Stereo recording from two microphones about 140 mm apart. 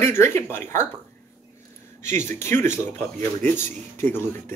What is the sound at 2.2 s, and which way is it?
Speech, 20° left (ahead or behind).